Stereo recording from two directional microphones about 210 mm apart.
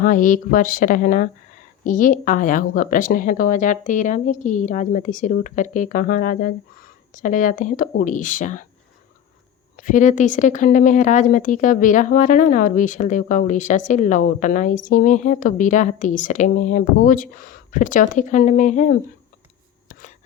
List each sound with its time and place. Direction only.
0.0 s a woman's voice: 40° left (ahead or behind)
9.7 s a woman's voice: 40° left (ahead or behind)
19.9 s a sound: 40° left (ahead or behind)